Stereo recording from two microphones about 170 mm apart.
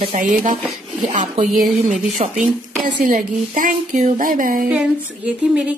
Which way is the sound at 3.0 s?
50° right (ahead or behind).